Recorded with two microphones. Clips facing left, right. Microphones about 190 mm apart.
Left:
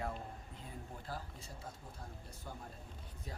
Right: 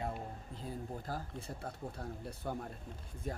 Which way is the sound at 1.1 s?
55° right (ahead or behind).